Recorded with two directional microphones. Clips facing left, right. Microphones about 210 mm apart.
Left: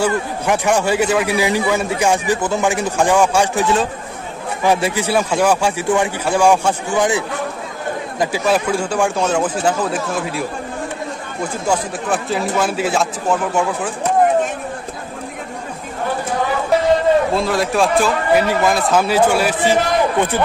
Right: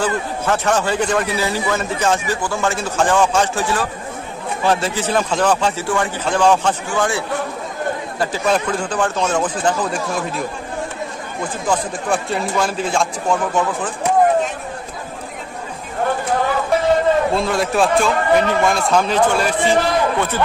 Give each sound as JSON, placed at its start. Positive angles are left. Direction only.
{"t": 0.0, "sound": "a man's voice", "side_deg": 10}
{"t": 4.6, "sound": "a man's voice", "side_deg": 10}
{"t": 11.6, "sound": "a man's voice", "side_deg": 5}
{"t": 17.3, "sound": "a man's voice", "side_deg": 0}